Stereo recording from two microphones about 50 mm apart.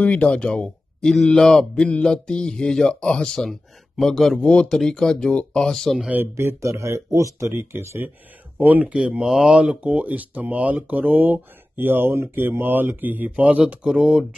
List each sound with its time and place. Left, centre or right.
0.0 s speech: left; by 4.4 s centre
4.4 s speech: left
4.6 s speech: centre
5.3 s speech: left
6.3 s speech: right
7.3 s speech: right
8.8 s speech: right
9.8 s speech: right
13.8 s speech: centre